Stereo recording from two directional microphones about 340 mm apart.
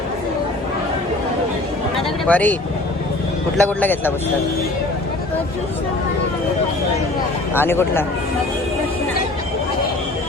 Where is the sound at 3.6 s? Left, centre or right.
Centre.